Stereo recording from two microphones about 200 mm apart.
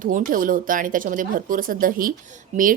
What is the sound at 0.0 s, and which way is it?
A woman's voice, 40° right (ahead or behind).